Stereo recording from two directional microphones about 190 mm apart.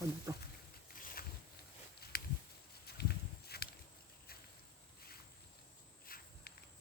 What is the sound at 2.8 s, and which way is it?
Horse, 55° left (ahead or behind).